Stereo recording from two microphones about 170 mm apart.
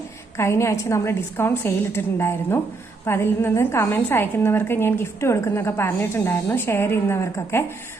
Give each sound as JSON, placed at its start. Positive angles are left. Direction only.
{"t": 0.3, "sound": "a woman's voice", "side_deg": 15}